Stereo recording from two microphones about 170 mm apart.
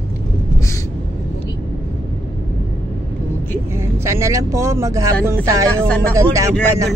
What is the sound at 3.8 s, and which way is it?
Vehicle, 15° right (ahead or behind).